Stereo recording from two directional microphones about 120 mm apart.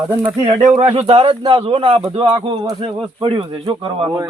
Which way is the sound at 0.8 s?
55° right (ahead or behind).